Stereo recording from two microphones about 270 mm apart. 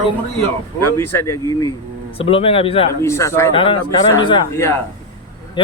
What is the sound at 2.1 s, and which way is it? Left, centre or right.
Speech, left.